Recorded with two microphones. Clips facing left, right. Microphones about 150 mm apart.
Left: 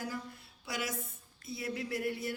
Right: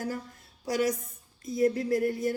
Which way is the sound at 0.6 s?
40° right (ahead or behind).